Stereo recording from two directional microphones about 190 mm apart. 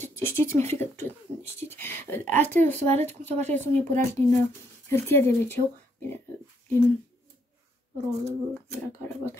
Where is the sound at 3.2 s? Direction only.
35° right (ahead or behind).